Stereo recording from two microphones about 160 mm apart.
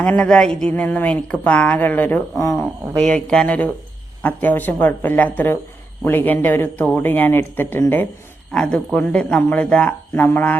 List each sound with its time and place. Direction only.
0.0 s a woman's voice: 5° left (ahead or behind)
3.2 s a woman's voice: 5° left (ahead or behind)